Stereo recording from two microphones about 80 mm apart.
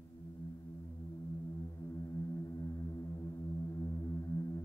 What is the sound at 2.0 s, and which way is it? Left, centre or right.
Music, left.